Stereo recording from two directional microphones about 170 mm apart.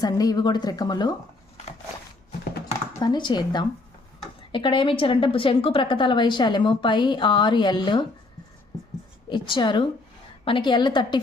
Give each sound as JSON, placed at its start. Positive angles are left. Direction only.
{"t": 0.0, "sound": "a woman's voice", "side_deg": 20}
{"t": 3.0, "sound": "a woman's voice", "side_deg": 25}
{"t": 9.3, "sound": "a woman's voice", "side_deg": 25}